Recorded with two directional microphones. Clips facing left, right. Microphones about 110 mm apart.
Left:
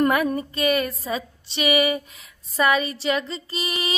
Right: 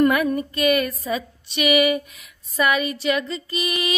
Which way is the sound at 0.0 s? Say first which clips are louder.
Right 2 dB; 30° left (ahead or behind).